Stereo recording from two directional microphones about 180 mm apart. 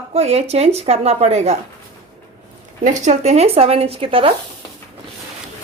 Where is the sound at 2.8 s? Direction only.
45° right (ahead or behind).